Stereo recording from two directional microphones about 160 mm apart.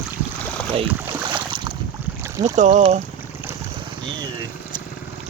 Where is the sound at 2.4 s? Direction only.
50° right (ahead or behind).